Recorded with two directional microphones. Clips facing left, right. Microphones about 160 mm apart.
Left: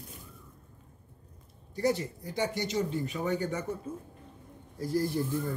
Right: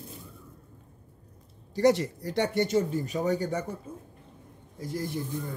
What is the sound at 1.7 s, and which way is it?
Speech, 90° right.